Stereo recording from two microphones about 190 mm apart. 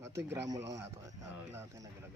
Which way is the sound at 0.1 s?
15° right (ahead or behind).